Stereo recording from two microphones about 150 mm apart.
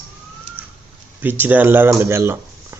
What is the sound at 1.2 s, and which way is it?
Speech, 10° right (ahead or behind).